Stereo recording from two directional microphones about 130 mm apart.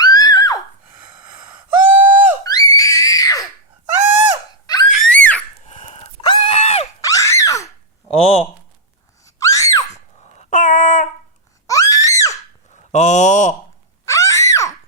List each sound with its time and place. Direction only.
0.0 s neigh: 30° left (ahead or behind)
1.5 s gasp: 15° right (ahead or behind)
2.4 s screaming: 30° left (ahead or behind)
4.6 s a sound: 30° left (ahead or behind)
4.9 s screaming: 10° left (ahead or behind)
5.6 s dog: 55° left (ahead or behind)
6.2 s a sound: 50° left (ahead or behind)
7.0 s screaming: 25° left (ahead or behind)
8.1 s speech: 50° left (ahead or behind)
9.2 s screaming: 25° left (ahead or behind)
9.9 s dog: 60° left (ahead or behind); by 11.1 s 90° left
11.6 s screaming: 25° left (ahead or behind)
12.7 s a sound: 65° left (ahead or behind)
14.0 s screaming: 25° left (ahead or behind)